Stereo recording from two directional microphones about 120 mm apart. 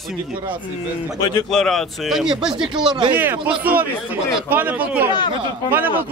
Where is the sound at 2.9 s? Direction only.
40° right (ahead or behind).